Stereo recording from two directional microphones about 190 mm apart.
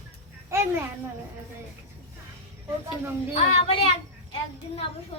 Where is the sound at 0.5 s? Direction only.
15° right (ahead or behind).